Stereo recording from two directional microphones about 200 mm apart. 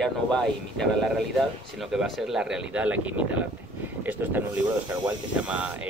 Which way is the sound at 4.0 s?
10° right (ahead or behind).